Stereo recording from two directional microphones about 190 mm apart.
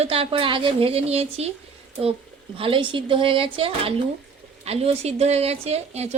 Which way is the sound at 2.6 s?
25° right (ahead or behind).